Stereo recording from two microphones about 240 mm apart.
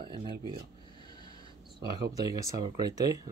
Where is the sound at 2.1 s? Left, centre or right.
Centre.